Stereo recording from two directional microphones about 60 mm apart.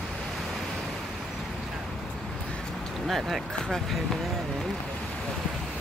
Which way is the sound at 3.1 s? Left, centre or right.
Centre.